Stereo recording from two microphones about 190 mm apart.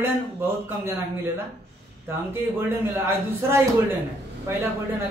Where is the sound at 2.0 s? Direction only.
10° right (ahead or behind).